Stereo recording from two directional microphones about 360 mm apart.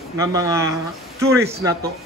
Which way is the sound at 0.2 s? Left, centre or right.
Centre.